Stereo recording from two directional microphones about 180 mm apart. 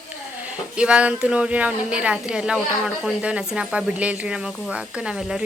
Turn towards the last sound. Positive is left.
turn(degrees=-5)  # may be behind; listen again after turning